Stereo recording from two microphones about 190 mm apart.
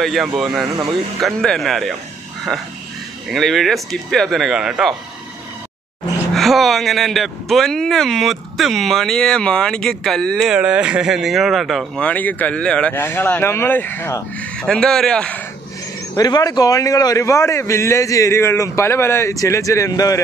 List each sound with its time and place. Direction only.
0.0 s speech: centre (ahead or behind)
3.3 s speech: centre (ahead or behind)
6.3 s speech: centre (ahead or behind)
16.2 s a man's voice: 20° left (ahead or behind)